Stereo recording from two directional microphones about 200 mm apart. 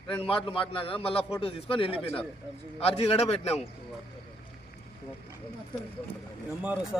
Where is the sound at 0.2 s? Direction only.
25° left (ahead or behind).